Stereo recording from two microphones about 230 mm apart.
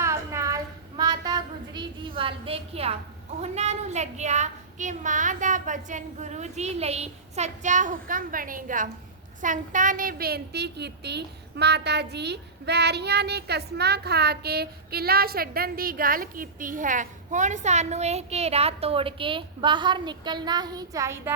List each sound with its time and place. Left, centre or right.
0.0 s child singing: centre
3.4 s speech: right; by 21.3 s centre